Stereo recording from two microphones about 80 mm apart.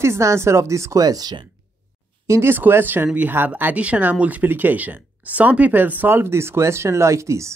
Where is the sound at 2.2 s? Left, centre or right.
Right.